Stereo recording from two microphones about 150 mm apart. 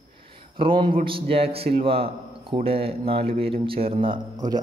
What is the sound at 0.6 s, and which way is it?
A man's voice, 35° right (ahead or behind).